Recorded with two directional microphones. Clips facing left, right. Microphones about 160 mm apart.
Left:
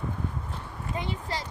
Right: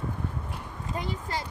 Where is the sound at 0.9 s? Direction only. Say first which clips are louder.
Even; 40° right (ahead or behind).